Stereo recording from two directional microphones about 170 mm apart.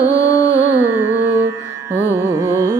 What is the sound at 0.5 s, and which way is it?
Carnatic music, 10° right (ahead or behind).